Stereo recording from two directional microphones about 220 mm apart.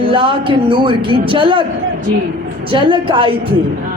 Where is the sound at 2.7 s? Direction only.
25° right (ahead or behind).